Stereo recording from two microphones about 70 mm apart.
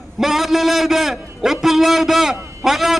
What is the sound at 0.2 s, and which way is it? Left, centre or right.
A man's voice, centre.